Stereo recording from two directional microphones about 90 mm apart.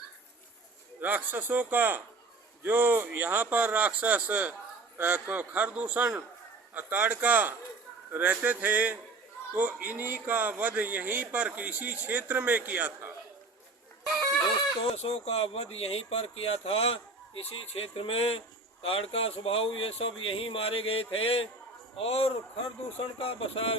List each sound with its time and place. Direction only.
1.0 s a man's voice: 20° right (ahead or behind)
14.8 s speech: 90° left